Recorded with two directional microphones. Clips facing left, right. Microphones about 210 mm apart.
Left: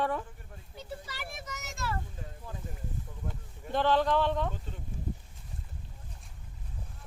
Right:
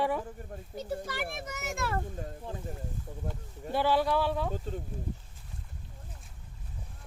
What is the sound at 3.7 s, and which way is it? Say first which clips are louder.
Speech: even; 10° right (ahead or behind).